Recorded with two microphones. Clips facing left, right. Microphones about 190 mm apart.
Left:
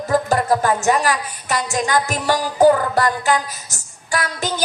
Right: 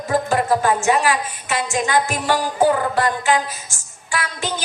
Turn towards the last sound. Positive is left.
turn(degrees=40)  # may be behind; listen again after turning